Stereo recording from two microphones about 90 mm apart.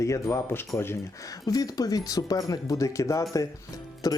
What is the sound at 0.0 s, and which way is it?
Speech, 35° left (ahead or behind).